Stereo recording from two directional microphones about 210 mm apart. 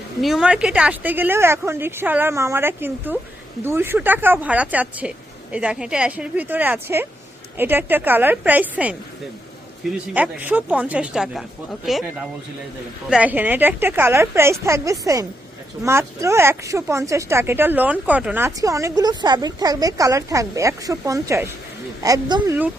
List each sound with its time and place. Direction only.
0.2 s speech: centre (ahead or behind)
10.2 s speech: 5° right (ahead or behind)
13.1 s speech: 5° right (ahead or behind)